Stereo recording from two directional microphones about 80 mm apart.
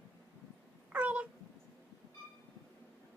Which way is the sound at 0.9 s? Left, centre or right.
Centre.